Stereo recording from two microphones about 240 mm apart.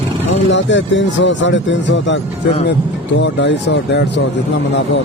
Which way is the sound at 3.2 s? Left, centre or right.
Left.